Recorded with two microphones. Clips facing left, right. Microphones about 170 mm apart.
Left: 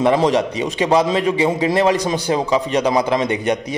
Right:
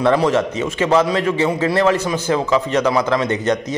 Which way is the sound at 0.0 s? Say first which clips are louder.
Even; 15° left (ahead or behind).